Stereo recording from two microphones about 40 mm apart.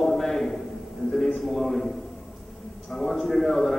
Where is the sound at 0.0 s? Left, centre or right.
Centre.